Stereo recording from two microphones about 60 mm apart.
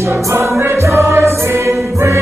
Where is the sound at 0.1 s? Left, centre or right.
Right.